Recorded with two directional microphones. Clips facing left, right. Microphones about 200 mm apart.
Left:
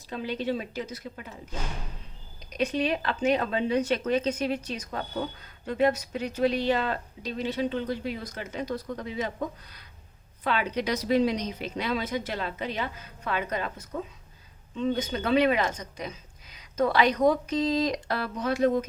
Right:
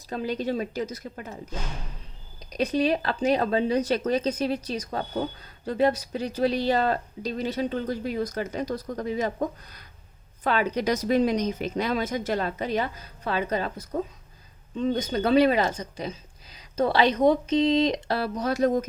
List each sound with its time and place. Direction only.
0.1 s speech: 40° right (ahead or behind)
2.5 s a woman's voice: 35° right (ahead or behind)